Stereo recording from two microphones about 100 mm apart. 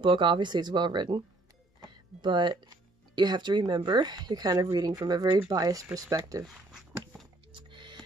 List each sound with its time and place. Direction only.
0.0 s speech: 55° right (ahead or behind)
2.2 s speech: 50° right (ahead or behind); by 6.4 s 35° right (ahead or behind)
6.4 s a sound: 5° right (ahead or behind)
7.5 s music: 50° right (ahead or behind)